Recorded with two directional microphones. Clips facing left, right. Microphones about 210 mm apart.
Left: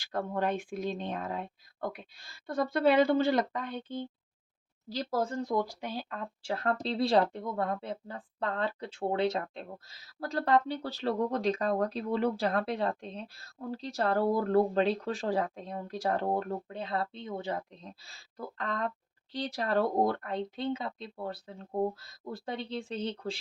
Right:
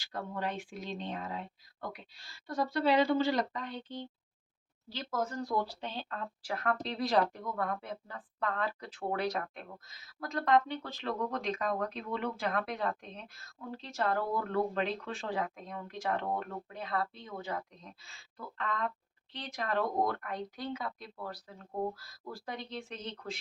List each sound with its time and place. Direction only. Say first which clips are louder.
0.0 s a woman's voice: left 6 dB; 50° left (ahead or behind)
4.9 s speech: left 4 dB; 35° left (ahead or behind); by 6.2 s 10° left (ahead or behind)
6.4 s a woman's voice: left 3 dB; 30° left (ahead or behind)